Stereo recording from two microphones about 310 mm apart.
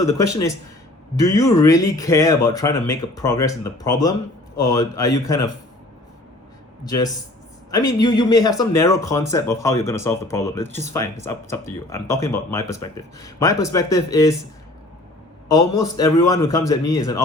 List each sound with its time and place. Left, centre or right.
0.0 s speech: centre
6.8 s speech: centre
15.4 s speech: centre